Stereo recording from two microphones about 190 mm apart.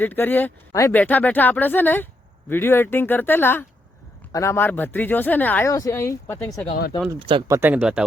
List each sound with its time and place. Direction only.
0.0 s speech: 10° left (ahead or behind)
7.2 s speech: 25° right (ahead or behind)
7.4 s speech: 10° right (ahead or behind)